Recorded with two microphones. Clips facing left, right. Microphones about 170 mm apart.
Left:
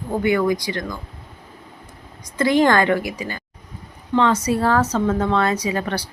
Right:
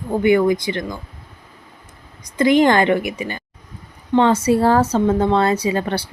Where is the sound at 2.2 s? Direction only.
20° right (ahead or behind).